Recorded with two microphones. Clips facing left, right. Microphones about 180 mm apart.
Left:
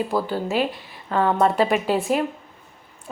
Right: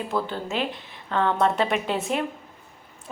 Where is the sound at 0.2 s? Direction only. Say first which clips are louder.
Left 3 dB; 5° left (ahead or behind).